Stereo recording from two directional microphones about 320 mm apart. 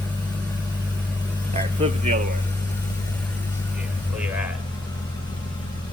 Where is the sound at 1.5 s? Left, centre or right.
Right.